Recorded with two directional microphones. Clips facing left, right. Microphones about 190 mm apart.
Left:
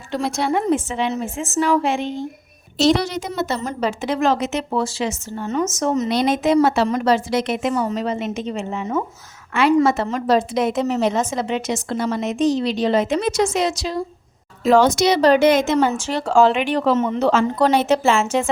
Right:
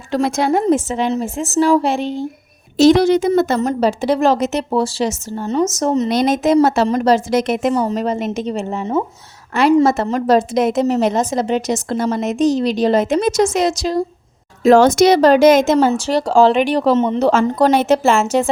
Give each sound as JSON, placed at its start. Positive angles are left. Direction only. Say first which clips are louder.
{"t": 0.3, "sound": "a woman's voice", "louder": "right 1 dB", "side_deg": -90}
{"t": 0.5, "sound": "a woman's voice", "louder": "right 4 dB", "side_deg": -40}
{"t": 2.7, "sound": "a woman's voice", "louder": "right 7 dB", "side_deg": -55}
{"t": 3.8, "sound": "a woman's voice", "louder": "right 5 dB", "side_deg": -35}